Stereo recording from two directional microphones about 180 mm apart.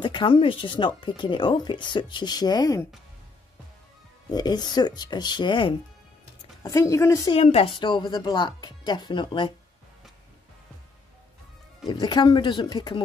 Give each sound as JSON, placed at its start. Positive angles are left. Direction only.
{"t": 0.0, "sound": "speech", "side_deg": 25}
{"t": 4.3, "sound": "a woman's voice", "side_deg": 25}
{"t": 7.3, "sound": "speech", "side_deg": 35}
{"t": 11.9, "sound": "speech", "side_deg": 25}